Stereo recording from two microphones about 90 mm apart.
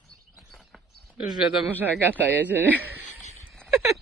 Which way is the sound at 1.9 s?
20° right (ahead or behind).